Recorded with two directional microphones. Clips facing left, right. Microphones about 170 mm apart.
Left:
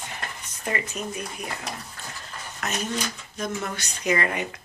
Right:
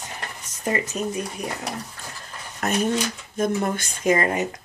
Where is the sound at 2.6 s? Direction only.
45° right (ahead or behind).